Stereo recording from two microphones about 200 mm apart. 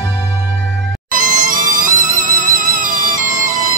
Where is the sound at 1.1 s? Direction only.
40° right (ahead or behind).